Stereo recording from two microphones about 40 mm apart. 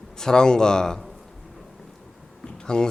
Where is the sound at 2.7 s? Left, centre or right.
Centre.